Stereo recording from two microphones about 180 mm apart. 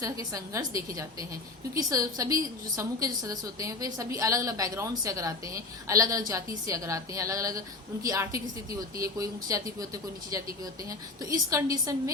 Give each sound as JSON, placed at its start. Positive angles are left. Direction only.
{"t": 0.0, "sound": "a woman's voice", "side_deg": -20}